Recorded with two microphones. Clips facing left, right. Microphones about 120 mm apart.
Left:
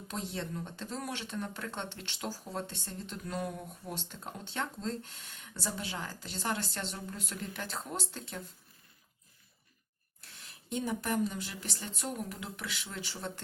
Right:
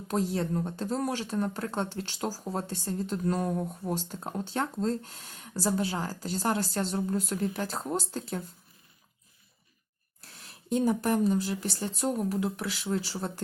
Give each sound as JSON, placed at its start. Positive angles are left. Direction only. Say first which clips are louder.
{"t": 0.1, "sound": "speech", "louder": "right 10 dB", "side_deg": -45}
{"t": 10.2, "sound": "speech", "louder": "right 9 dB", "side_deg": -35}